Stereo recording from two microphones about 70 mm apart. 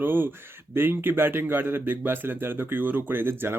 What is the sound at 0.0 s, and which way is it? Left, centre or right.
A man's voice, right.